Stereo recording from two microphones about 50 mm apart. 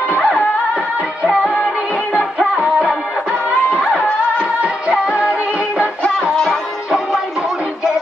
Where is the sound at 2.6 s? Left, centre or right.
Right.